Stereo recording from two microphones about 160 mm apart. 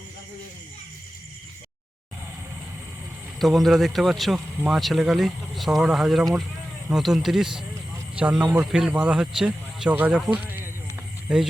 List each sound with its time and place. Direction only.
3.3 s speech: centre (ahead or behind)